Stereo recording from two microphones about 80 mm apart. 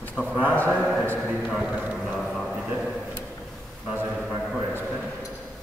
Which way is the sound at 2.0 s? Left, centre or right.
Centre.